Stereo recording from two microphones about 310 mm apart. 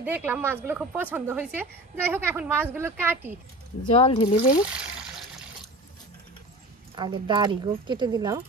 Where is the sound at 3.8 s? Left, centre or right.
Centre.